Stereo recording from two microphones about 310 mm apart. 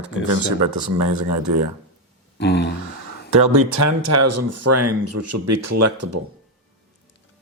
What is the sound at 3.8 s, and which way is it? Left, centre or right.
Speech, right.